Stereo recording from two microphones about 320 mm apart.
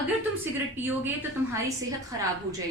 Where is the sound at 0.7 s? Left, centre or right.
Centre.